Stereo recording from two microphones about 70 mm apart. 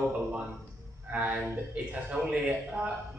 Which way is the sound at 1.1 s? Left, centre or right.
Right.